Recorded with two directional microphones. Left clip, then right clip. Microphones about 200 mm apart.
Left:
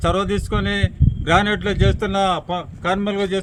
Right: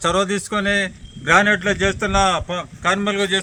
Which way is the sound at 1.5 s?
55° left (ahead or behind).